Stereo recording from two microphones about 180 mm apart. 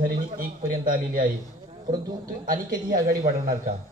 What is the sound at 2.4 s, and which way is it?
Speech, 50° right (ahead or behind).